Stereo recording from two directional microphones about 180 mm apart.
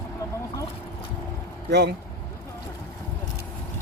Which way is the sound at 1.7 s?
70° right (ahead or behind).